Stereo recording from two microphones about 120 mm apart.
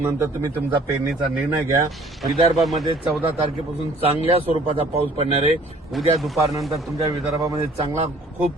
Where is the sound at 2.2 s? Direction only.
Centre (ahead or behind).